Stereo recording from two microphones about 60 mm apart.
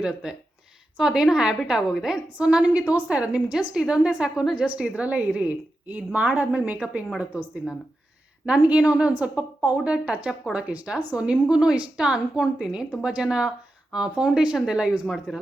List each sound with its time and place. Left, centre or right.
0.0 s a woman's voice: centre
8.5 s a woman's voice: right; by 15.4 s centre